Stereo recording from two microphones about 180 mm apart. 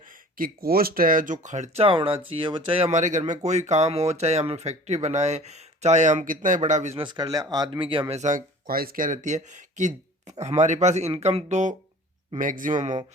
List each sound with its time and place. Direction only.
0.1 s speech: 50° right (ahead or behind)
7.0 s speech: 20° right (ahead or behind); by 13.0 s 45° right (ahead or behind)